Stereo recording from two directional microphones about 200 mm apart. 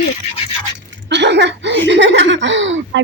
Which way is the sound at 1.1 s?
60° right (ahead or behind).